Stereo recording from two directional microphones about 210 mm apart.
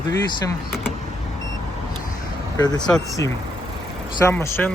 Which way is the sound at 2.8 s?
5° left (ahead or behind).